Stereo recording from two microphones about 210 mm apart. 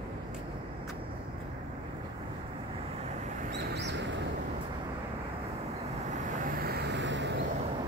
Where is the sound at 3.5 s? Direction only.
55° right (ahead or behind).